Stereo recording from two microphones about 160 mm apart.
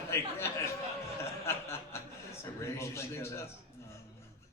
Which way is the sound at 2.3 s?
15° left (ahead or behind).